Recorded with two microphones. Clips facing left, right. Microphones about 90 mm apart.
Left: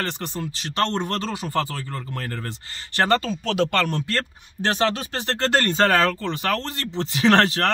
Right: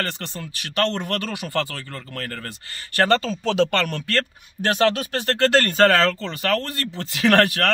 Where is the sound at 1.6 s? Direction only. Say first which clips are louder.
Left 3 dB; 15° left (ahead or behind).